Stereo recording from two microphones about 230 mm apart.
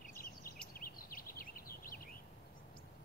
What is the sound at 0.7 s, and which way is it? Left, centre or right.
Bird vocalization, left.